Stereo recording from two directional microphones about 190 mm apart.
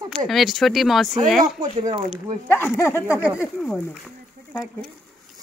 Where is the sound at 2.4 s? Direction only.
10° left (ahead or behind).